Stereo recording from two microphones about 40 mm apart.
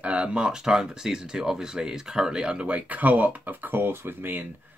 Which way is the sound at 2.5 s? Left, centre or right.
Right.